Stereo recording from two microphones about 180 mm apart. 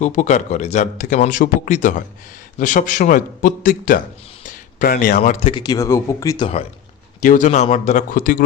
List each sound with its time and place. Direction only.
0.0 s a man's voice: 40° left (ahead or behind)
4.4 s a sound: 50° left (ahead or behind)
5.4 s speech: 30° left (ahead or behind)
7.2 s a man's voice: 45° left (ahead or behind)